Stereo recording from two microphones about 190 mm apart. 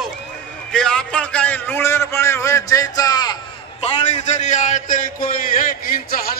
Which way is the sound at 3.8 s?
35° left (ahead or behind).